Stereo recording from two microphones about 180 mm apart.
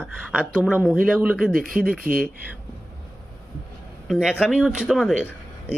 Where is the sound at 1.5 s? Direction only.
50° right (ahead or behind).